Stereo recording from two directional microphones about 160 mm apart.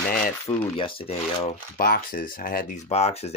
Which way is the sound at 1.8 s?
65° left (ahead or behind).